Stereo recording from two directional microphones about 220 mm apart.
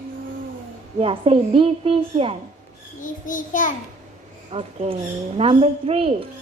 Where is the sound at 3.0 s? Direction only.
35° left (ahead or behind).